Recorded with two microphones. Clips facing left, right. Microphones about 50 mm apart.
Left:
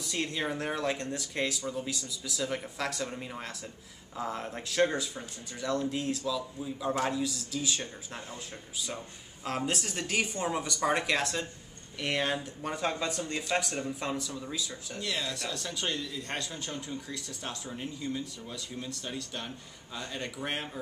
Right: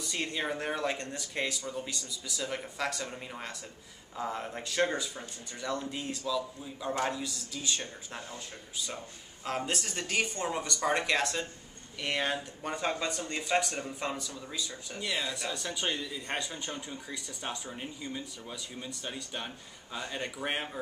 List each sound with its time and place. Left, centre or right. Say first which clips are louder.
0.0 s speech: left 1 dB; centre
15.0 s speech: right 1 dB; centre